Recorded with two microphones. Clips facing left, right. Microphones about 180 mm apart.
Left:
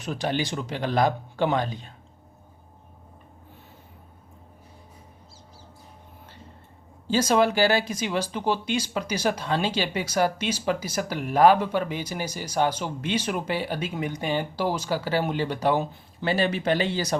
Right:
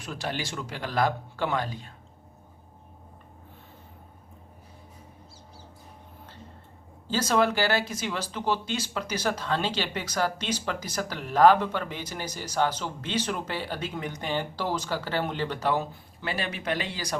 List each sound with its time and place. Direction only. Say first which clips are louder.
0.0 s speech: left 6 dB; 20° left (ahead or behind)
7.1 s speech: left 3 dB; 15° left (ahead or behind)
16.2 s speech: left 8 dB; 30° left (ahead or behind)